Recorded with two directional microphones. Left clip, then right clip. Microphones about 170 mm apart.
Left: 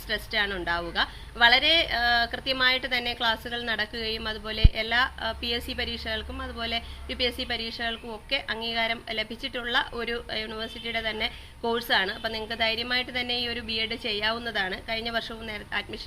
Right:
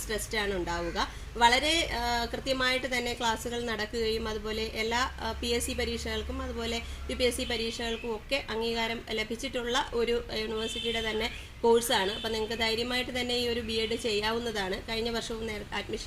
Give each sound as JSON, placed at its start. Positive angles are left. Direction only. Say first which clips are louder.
{"t": 0.1, "sound": "a woman's voice", "louder": "left 4 dB", "side_deg": 5}